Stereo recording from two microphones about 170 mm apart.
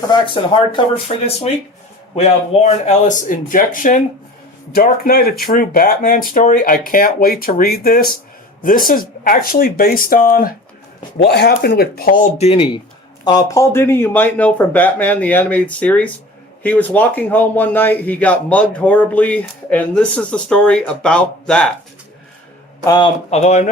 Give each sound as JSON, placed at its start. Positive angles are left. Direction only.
{"t": 0.1, "sound": "speech", "side_deg": 30}
{"t": 11.2, "sound": "speech", "side_deg": 75}
{"t": 22.9, "sound": "speech", "side_deg": 25}
{"t": 23.3, "sound": "speech", "side_deg": 40}